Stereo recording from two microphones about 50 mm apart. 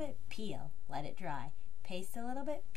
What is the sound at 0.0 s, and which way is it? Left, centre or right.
A woman's voice, centre.